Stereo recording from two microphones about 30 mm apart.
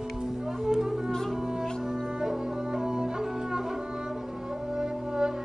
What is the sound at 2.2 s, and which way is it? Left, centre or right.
Music, right.